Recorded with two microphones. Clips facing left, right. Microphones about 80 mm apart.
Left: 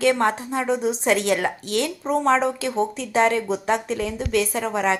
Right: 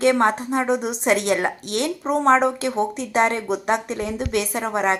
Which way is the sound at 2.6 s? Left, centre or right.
Centre.